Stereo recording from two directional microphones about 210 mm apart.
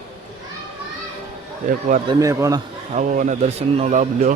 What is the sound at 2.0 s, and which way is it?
Speech, 15° right (ahead or behind).